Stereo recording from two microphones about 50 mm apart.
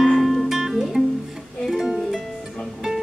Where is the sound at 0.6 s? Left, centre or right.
Centre.